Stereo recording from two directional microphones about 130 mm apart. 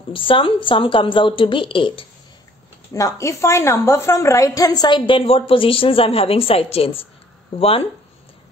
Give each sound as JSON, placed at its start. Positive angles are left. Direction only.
{"t": 0.1, "sound": "a woman's voice", "side_deg": 40}
{"t": 2.9, "sound": "a woman's voice", "side_deg": 25}